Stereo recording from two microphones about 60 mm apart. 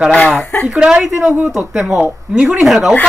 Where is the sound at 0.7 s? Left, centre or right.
Centre.